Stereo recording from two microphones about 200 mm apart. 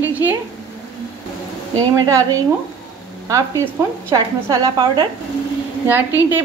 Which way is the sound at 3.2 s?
15° right (ahead or behind).